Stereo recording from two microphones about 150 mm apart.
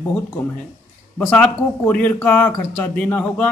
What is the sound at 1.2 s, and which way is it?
Speech, 5° left (ahead or behind).